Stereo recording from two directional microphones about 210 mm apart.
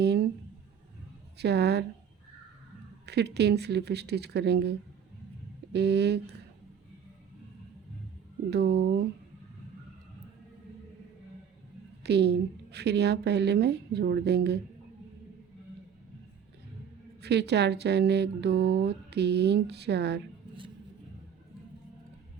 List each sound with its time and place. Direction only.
0.0 s a sound: 50° right (ahead or behind)
1.4 s speech: 50° right (ahead or behind)
3.1 s speech: 50° right (ahead or behind)
5.7 s speech: 50° right (ahead or behind)
8.4 s speech: 50° right (ahead or behind)
12.0 s speech: 50° right (ahead or behind)
17.2 s speech: 50° right (ahead or behind)